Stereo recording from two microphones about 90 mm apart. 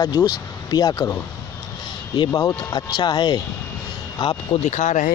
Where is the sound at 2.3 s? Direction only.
40° left (ahead or behind).